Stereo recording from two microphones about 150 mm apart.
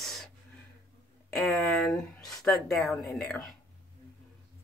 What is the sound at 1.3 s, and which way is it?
Speech, 5° left (ahead or behind).